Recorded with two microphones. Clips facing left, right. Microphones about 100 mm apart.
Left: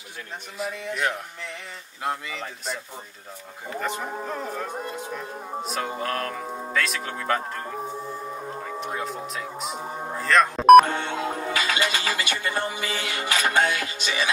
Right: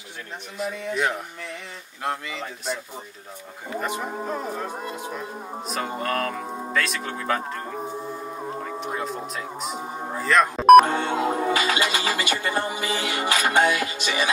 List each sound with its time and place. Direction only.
0.6 s speech: centre (ahead or behind)
3.7 s speech: 10° right (ahead or behind)
5.6 s speech: centre (ahead or behind)
8.6 s speech: centre (ahead or behind)
10.9 s music: 30° right (ahead or behind)